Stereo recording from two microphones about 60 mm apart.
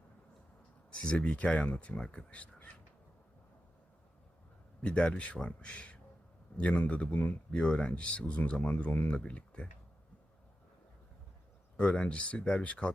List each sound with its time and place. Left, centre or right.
0.9 s speech: centre
4.8 s speech: centre
11.8 s speech: centre